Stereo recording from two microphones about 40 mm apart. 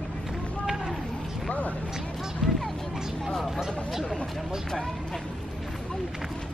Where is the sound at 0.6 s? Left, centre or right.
Centre.